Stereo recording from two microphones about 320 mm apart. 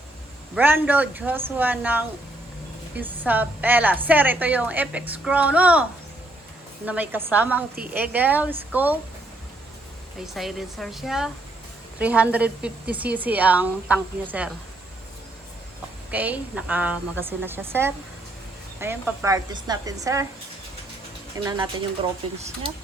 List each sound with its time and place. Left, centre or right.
0.5 s a woman's voice: centre
6.8 s a woman's voice: centre
10.2 s a woman's voice: centre
16.1 s a woman's voice: centre
21.3 s speech: centre